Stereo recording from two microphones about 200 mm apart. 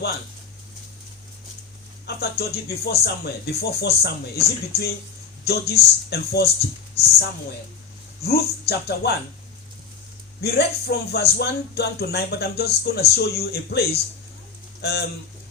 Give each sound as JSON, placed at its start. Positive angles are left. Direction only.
{"t": 2.1, "sound": "speech", "side_deg": 55}
{"t": 8.2, "sound": "speech", "side_deg": 55}
{"t": 10.4, "sound": "speech", "side_deg": 55}